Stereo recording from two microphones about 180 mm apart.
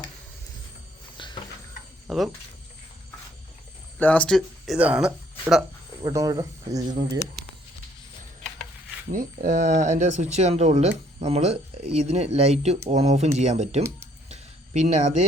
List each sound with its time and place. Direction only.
1.1 s a sound: 25° left (ahead or behind)
2.0 s speech: centre (ahead or behind)
3.9 s speech: 10° left (ahead or behind)
6.0 s speech: 20° right (ahead or behind)
9.1 s speech: 45° right (ahead or behind)
14.3 s a sound: 40° right (ahead or behind)